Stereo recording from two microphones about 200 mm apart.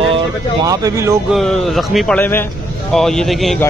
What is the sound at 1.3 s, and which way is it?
Speech, centre (ahead or behind).